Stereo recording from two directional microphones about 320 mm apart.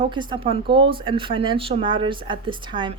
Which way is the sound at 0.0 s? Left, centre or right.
Centre.